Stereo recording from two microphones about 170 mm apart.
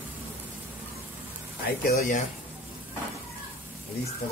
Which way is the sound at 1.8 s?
60° left (ahead or behind).